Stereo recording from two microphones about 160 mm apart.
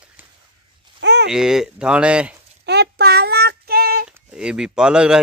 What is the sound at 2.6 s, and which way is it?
Child singing, 90° right.